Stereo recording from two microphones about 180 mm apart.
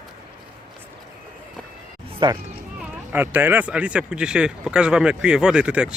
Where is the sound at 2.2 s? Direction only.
25° right (ahead or behind).